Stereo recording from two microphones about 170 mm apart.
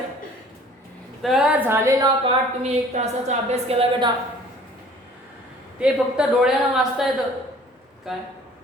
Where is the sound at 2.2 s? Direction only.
40° right (ahead or behind).